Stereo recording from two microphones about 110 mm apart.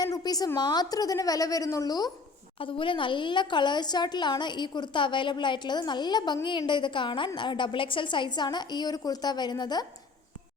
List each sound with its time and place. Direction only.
0.0 s a woman's voice: 35° left (ahead or behind)
2.6 s a woman's voice: 50° left (ahead or behind)